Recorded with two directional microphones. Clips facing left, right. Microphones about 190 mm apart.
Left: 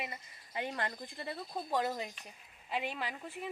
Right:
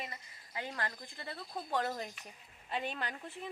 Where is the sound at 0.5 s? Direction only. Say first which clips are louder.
Left 3 dB; 20° left (ahead or behind).